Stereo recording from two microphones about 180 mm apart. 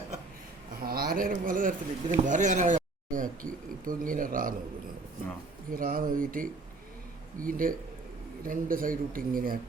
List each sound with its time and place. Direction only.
0.8 s speech: 55° right (ahead or behind)
5.7 s speech: 50° right (ahead or behind)